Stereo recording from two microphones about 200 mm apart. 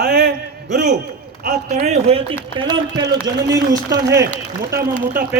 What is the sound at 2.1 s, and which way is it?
Speech, 30° right (ahead or behind).